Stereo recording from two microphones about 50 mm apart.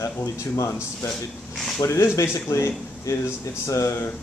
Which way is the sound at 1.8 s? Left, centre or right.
Left.